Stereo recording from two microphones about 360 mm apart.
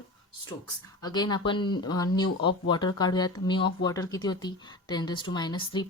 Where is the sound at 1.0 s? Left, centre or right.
Centre.